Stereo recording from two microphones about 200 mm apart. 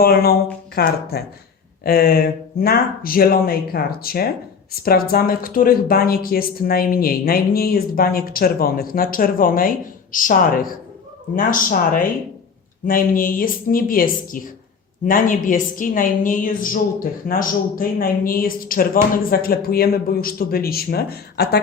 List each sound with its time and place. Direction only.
0.0 s speech: 50° left (ahead or behind)